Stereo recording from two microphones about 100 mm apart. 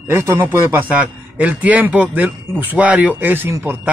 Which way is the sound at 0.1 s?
25° right (ahead or behind).